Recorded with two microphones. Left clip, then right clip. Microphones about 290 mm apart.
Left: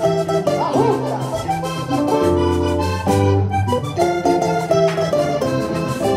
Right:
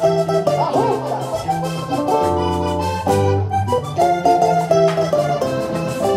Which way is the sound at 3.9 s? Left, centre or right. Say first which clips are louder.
Right 3 dB; right.